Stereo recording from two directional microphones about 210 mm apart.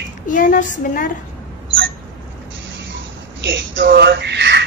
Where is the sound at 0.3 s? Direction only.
40° left (ahead or behind).